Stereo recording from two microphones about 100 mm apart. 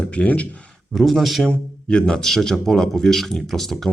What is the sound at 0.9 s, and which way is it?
Speech, centre (ahead or behind).